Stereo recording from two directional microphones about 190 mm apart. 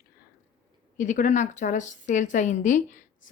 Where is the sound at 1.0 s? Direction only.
40° left (ahead or behind).